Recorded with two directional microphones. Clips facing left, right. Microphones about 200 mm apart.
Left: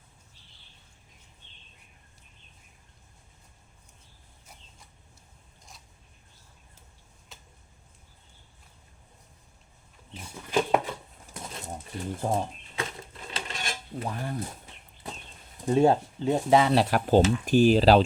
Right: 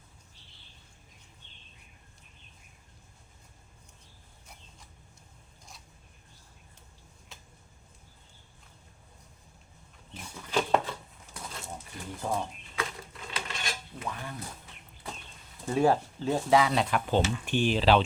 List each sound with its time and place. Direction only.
7.3 s tick-tock: centre (ahead or behind)
10.5 s dog: 15° left (ahead or behind)
11.3 s a sound: 20° left (ahead or behind)
11.9 s sewing machine: 35° left (ahead or behind)
14.0 s speech: 40° left (ahead or behind)
15.6 s speech: 25° left (ahead or behind); by 18.0 s 40° left (ahead or behind)